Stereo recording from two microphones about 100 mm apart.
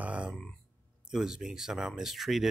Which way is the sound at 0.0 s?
10° right (ahead or behind).